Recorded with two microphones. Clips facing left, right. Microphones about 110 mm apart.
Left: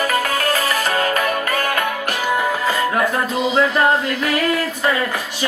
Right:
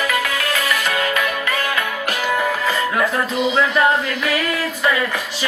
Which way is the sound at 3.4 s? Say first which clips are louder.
Even; 35° left (ahead or behind).